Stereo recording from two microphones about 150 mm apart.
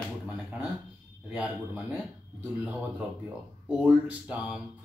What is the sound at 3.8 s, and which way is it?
Speech, 10° right (ahead or behind).